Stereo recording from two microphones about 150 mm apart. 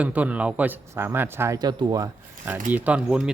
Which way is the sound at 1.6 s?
30° right (ahead or behind).